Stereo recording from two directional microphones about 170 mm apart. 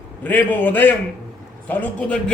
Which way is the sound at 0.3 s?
10° left (ahead or behind).